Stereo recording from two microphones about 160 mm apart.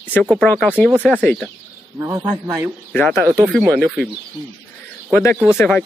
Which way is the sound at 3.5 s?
5° left (ahead or behind).